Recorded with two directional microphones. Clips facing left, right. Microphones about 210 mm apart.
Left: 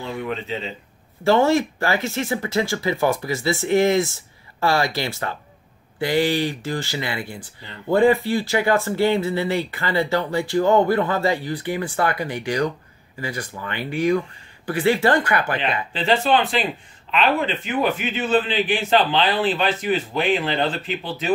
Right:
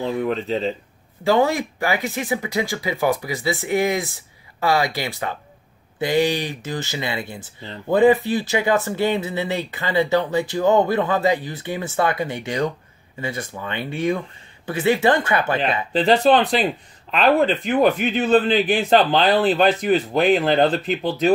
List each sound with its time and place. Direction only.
0.0 s a man's voice: 40° right (ahead or behind)
1.2 s speech: 15° right (ahead or behind)
15.6 s a man's voice: 40° right (ahead or behind)